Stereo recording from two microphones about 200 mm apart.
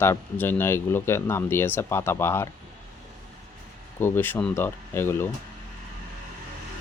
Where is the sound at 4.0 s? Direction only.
10° left (ahead or behind).